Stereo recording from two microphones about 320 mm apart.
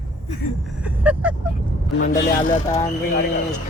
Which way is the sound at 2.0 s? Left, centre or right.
Left.